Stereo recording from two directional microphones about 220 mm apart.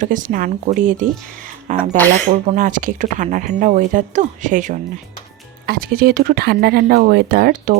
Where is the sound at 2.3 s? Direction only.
35° right (ahead or behind).